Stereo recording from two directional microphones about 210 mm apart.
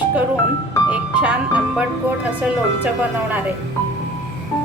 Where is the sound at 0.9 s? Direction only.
5° right (ahead or behind).